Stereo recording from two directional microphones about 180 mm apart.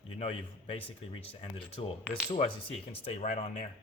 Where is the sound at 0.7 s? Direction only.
30° left (ahead or behind).